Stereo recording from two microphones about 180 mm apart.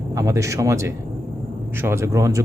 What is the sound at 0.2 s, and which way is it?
A man's voice, 15° right (ahead or behind).